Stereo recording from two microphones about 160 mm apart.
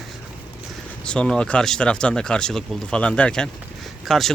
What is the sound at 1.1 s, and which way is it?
Speech, 5° left (ahead or behind).